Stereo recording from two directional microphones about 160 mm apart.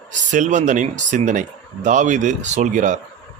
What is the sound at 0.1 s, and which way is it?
Speech, 50° right (ahead or behind).